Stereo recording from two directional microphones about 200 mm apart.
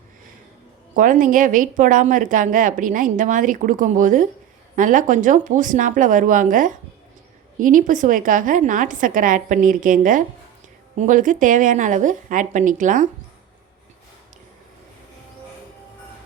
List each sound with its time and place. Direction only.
0.9 s a woman's voice: 40° right (ahead or behind)